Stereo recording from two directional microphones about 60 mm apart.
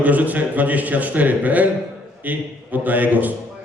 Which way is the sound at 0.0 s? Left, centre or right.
Right.